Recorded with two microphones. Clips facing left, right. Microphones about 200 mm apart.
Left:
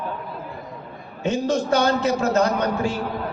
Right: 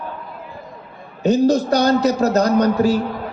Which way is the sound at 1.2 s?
40° right (ahead or behind).